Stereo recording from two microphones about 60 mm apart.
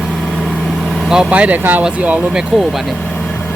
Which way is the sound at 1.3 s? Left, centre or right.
Right.